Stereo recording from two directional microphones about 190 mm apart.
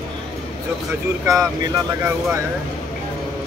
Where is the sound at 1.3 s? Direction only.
15° right (ahead or behind).